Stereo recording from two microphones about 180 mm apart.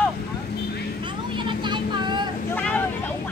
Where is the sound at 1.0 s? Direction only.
25° right (ahead or behind).